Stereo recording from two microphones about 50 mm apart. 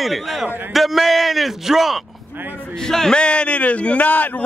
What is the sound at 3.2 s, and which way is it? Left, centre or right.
A man's voice, left.